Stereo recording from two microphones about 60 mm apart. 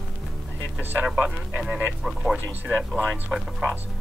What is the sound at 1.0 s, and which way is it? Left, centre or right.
Speech, centre.